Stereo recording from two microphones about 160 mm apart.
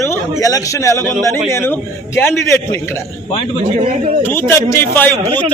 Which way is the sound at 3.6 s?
40° right (ahead or behind).